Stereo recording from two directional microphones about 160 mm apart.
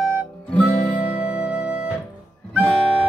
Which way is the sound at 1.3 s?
10° right (ahead or behind).